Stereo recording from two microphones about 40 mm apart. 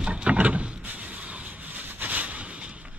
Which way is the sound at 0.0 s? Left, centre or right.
Right.